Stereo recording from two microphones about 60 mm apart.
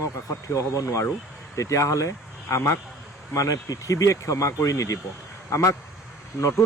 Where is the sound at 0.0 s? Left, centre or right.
Left.